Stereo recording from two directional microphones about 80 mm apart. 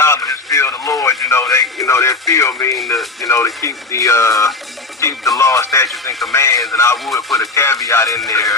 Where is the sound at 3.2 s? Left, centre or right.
Left.